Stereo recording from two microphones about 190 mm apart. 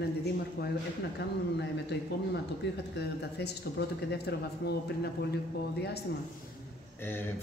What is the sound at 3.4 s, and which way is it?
A man's voice, 60° left (ahead or behind).